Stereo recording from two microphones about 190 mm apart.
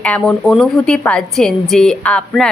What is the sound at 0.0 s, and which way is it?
A woman's voice, 5° left (ahead or behind).